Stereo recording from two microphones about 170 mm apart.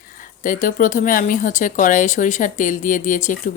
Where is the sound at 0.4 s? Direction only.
50° left (ahead or behind).